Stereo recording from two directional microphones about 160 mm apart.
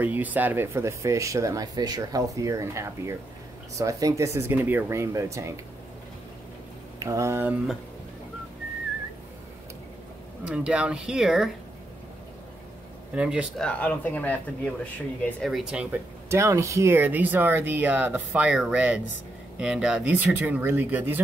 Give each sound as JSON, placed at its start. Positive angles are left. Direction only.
{"t": 0.0, "sound": "speech", "side_deg": -10}
{"t": 7.0, "sound": "speech", "side_deg": -20}
{"t": 10.4, "sound": "speech", "side_deg": -5}
{"t": 13.1, "sound": "speech", "side_deg": -5}
{"t": 13.6, "sound": "speech", "side_deg": 10}